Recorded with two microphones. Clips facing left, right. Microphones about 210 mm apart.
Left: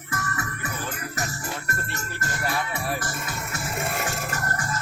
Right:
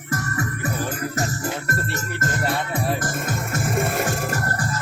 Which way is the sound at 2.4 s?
25° right (ahead or behind).